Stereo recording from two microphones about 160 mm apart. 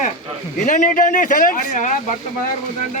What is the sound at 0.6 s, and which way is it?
Speech, 50° left (ahead or behind).